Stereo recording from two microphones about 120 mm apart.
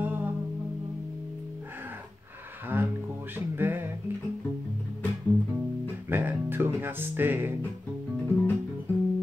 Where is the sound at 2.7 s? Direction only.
20° right (ahead or behind).